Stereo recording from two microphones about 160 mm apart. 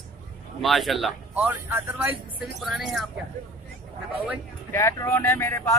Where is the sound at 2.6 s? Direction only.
Centre (ahead or behind).